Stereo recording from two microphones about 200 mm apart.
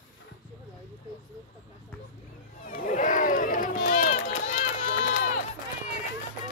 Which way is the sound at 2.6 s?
45° left (ahead or behind).